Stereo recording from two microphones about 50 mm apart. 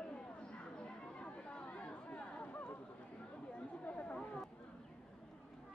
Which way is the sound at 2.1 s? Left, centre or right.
Left.